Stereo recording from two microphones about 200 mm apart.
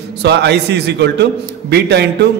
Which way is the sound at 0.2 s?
55° right (ahead or behind).